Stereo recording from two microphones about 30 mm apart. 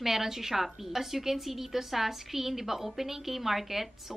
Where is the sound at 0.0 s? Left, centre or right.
Centre.